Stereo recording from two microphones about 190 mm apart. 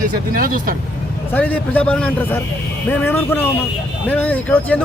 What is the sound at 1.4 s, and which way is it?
A man's voice, 10° left (ahead or behind).